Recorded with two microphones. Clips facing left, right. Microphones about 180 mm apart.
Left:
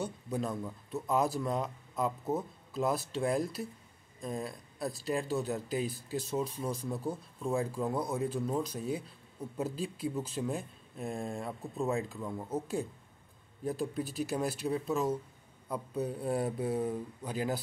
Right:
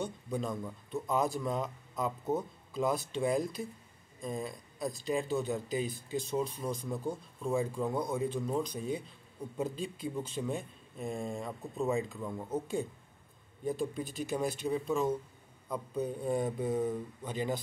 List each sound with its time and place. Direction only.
0.0 s speech: 5° left (ahead or behind)